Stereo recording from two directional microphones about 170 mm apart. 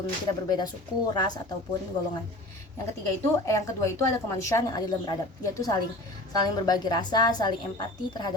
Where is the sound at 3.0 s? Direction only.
20° left (ahead or behind).